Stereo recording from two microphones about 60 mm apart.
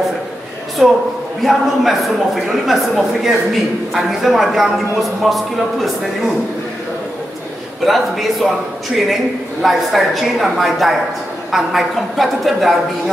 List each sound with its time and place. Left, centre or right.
0.8 s a man's voice: centre
7.8 s a man's voice: centre
9.6 s a man's voice: centre